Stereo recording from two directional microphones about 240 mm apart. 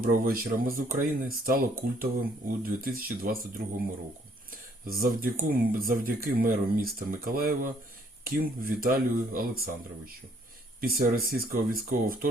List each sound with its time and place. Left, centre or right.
0.0 s speech: right
4.9 s speech: right
10.8 s speech: right